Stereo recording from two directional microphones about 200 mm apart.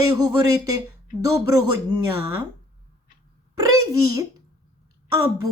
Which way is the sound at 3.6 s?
15° right (ahead or behind).